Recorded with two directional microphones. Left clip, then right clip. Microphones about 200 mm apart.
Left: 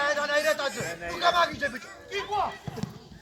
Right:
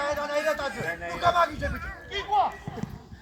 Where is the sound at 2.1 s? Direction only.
65° left (ahead or behind).